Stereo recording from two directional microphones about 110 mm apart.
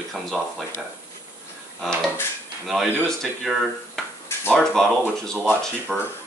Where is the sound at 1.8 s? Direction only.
Centre (ahead or behind).